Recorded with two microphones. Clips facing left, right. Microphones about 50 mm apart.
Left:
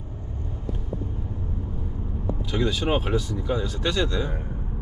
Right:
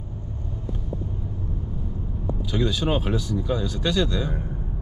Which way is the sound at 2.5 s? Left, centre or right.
Left.